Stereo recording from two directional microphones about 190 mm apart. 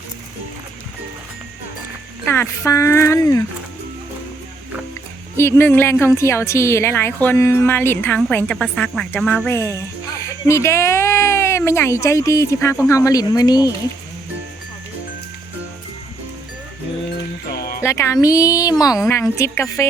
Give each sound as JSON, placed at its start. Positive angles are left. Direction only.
{"t": 2.2, "sound": "a woman's voice", "side_deg": 10}
{"t": 5.4, "sound": "a woman's voice", "side_deg": 10}
{"t": 17.5, "sound": "music", "side_deg": 55}
{"t": 17.7, "sound": "a woman's voice", "side_deg": 15}